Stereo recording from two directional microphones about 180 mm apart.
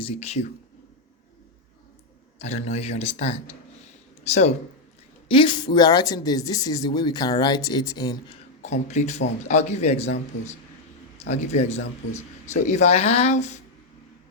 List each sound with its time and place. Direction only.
0.0 s a man's voice: 35° left (ahead or behind)
2.4 s a man's voice: 35° left (ahead or behind)
5.3 s speech: 25° left (ahead or behind)
8.6 s a man's voice: 40° left (ahead or behind)